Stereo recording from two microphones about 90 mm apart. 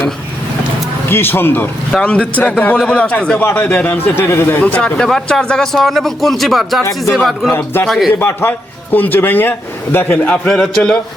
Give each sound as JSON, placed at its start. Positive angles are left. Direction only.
{"t": 1.1, "sound": "a man's voice", "side_deg": 25}
{"t": 1.9, "sound": "a man's voice", "side_deg": 10}
{"t": 4.6, "sound": "a man's voice", "side_deg": 15}
{"t": 7.5, "sound": "a man's voice", "side_deg": 25}
{"t": 7.9, "sound": "a man's voice", "side_deg": -5}
{"t": 8.2, "sound": "a man's voice", "side_deg": 30}
{"t": 10.5, "sound": "a man's voice", "side_deg": 5}